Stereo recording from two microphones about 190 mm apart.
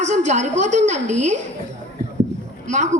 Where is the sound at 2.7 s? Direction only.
40° right (ahead or behind).